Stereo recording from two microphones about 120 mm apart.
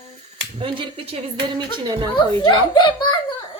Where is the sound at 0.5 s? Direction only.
50° right (ahead or behind).